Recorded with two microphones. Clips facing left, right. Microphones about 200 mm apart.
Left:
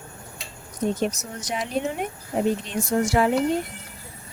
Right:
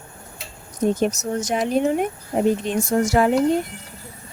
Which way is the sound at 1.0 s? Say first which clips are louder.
Right 6 dB; 45° right (ahead or behind).